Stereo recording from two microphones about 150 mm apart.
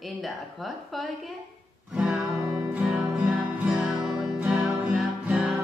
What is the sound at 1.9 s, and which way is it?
Music, 5° right (ahead or behind).